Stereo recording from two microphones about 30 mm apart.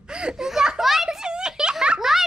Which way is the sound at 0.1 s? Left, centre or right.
Right.